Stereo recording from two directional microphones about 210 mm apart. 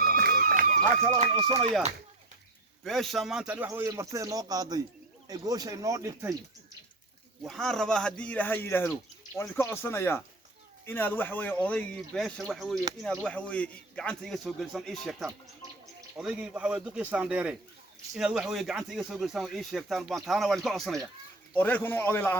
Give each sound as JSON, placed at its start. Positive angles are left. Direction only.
{"t": 0.2, "sound": "run", "side_deg": -45}
{"t": 1.1, "sound": "speech", "side_deg": -30}
{"t": 2.8, "sound": "a man's voice", "side_deg": 0}
{"t": 7.4, "sound": "speech", "side_deg": 0}